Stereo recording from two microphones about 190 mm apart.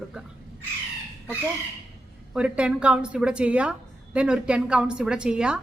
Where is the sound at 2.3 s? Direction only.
5° right (ahead or behind).